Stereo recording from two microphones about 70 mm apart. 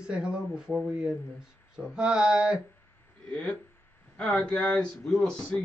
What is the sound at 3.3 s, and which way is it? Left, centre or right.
Speech, centre.